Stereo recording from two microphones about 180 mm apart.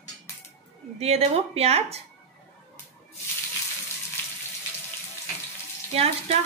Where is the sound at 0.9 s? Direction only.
35° right (ahead or behind).